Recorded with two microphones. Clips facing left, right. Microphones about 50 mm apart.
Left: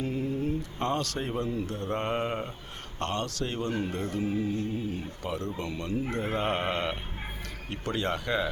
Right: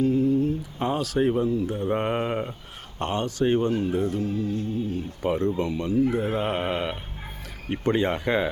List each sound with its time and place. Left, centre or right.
0.0 s a sound: centre
0.8 s mantra: centre
3.8 s mantra: centre
4.2 s music: centre
5.2 s speech: right
5.7 s mantra: centre
6.1 s a sound: centre
7.7 s speech: right